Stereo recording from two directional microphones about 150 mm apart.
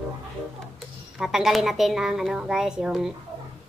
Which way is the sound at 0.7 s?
5° right (ahead or behind).